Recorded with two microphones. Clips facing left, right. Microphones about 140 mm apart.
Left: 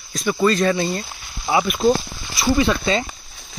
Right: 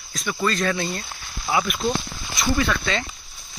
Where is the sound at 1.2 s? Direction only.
20° left (ahead or behind).